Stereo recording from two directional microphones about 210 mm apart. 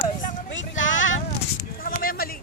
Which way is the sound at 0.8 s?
65° left (ahead or behind).